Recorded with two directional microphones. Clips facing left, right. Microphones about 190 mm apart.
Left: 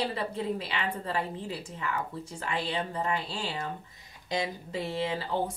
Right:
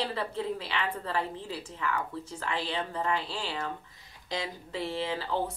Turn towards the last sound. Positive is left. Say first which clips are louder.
# left 1 dB
turn(degrees=15)  # may be behind; listen again after turning